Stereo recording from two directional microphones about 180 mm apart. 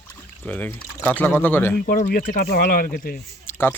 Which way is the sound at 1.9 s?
55° left (ahead or behind).